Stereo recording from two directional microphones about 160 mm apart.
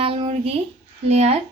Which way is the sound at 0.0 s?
35° right (ahead or behind).